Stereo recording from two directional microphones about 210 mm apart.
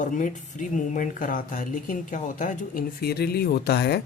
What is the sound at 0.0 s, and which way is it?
Speech, 40° left (ahead or behind).